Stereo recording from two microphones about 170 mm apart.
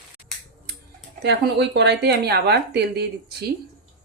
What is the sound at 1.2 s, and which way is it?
Speech, 85° right.